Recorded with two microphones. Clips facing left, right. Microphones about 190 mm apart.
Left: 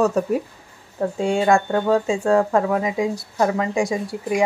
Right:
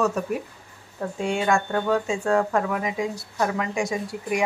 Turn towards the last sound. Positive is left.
turn(degrees=30)  # may be behind; listen again after turning